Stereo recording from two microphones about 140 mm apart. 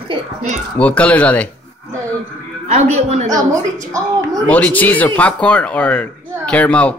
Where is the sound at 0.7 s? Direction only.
10° left (ahead or behind).